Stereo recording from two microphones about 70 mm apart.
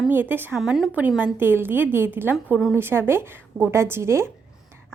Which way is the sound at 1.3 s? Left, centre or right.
Right.